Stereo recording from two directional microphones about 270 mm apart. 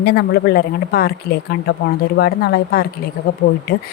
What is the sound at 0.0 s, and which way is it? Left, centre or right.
Speech, left.